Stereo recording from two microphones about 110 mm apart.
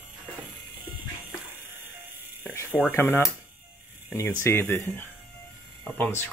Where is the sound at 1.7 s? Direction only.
20° right (ahead or behind).